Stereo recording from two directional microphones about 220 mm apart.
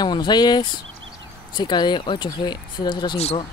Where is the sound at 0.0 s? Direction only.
20° left (ahead or behind).